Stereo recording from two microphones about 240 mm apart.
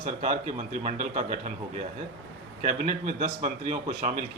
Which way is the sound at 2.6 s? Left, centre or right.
Right.